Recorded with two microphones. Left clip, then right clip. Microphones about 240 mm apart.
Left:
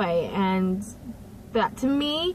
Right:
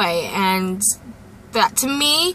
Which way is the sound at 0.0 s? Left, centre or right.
Centre.